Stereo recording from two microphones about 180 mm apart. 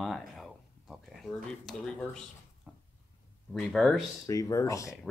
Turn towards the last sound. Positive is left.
turn(degrees=15)  # may be behind; listen again after turning